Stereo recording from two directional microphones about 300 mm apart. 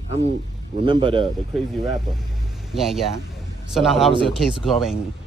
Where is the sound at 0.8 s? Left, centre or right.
Centre.